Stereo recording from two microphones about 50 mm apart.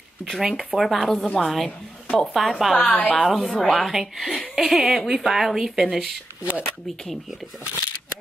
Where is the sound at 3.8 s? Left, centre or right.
Centre.